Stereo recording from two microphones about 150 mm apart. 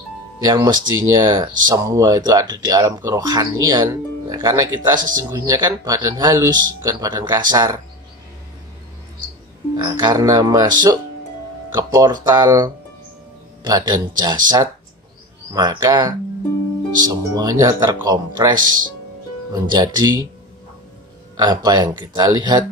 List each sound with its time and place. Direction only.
0.4 s speech: 25° right (ahead or behind)
9.8 s speech: 30° right (ahead or behind)
21.4 s speech: 25° right (ahead or behind)